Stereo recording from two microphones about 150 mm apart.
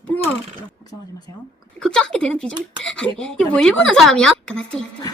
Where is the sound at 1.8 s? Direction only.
5° left (ahead or behind).